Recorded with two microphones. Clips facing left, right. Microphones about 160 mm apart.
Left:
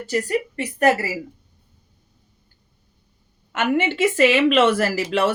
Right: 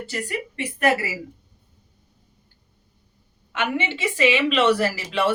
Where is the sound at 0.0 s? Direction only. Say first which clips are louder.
Left 7 dB; 40° left (ahead or behind).